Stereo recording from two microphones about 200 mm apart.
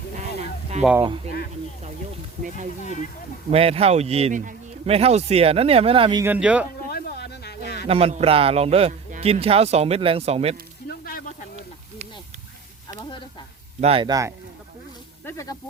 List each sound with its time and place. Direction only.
0.2 s a sound: 35° right (ahead or behind)
2.8 s speech: 40° left (ahead or behind)
3.5 s speech: 30° right (ahead or behind)
6.2 s a man's voice: 5° right (ahead or behind)
6.9 s a sound: 55° left (ahead or behind)
7.9 s speech: 30° right (ahead or behind)
11.0 s snake: 45° left (ahead or behind)
12.9 s a sound: 20° left (ahead or behind)
13.8 s speech: 25° right (ahead or behind)
15.2 s snake: 15° left (ahead or behind)